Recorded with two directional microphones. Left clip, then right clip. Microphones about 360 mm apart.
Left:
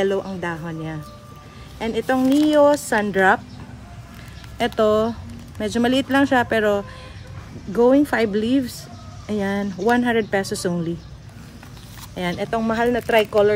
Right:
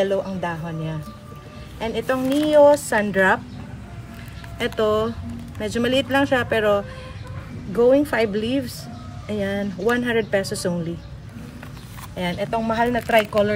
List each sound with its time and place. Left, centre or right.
0.0 s speech: left
4.6 s speech: left
12.2 s speech: left